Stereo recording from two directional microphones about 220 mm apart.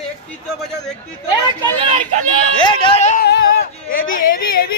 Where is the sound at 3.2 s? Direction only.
45° left (ahead or behind).